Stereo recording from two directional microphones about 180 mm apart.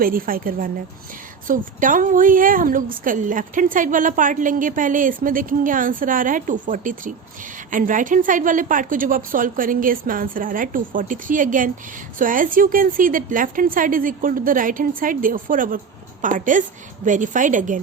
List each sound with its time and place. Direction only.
0.0 s a woman's voice: 50° right (ahead or behind)